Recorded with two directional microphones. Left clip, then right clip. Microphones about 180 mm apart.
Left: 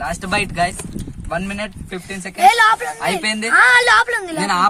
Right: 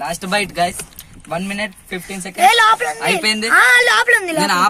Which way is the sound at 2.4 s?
25° right (ahead or behind).